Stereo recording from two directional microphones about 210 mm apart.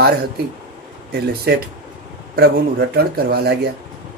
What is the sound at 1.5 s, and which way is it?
Speech, 50° right (ahead or behind).